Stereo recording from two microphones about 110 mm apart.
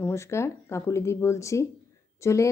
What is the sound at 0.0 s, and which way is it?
A woman's voice, 25° left (ahead or behind).